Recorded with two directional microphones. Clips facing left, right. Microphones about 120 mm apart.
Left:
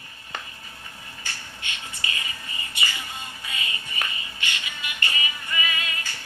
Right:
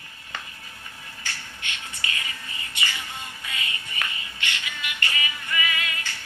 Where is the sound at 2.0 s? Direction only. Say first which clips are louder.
Even; 20° left (ahead or behind).